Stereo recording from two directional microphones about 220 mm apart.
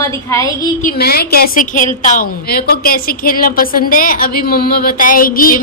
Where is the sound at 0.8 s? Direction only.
45° left (ahead or behind).